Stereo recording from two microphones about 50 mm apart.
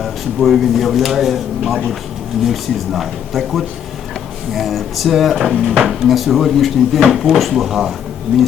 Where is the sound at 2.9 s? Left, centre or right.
Centre.